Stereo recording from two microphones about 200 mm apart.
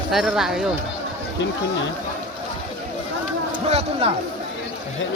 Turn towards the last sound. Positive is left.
turn(degrees=-30)  # may be behind; listen again after turning